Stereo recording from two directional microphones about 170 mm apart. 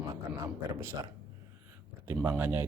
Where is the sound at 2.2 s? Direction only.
10° right (ahead or behind).